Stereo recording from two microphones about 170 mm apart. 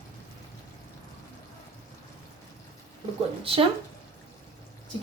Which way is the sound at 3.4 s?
35° right (ahead or behind).